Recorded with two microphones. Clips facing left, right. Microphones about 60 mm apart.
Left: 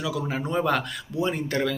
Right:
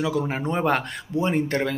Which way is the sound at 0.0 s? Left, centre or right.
Right.